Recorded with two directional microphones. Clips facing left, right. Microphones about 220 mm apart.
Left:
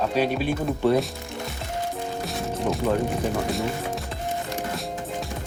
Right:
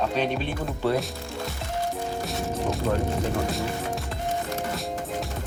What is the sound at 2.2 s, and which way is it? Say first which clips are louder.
Music: even; centre (ahead or behind).